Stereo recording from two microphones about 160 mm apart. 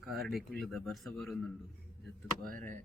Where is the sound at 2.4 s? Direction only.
60° right (ahead or behind).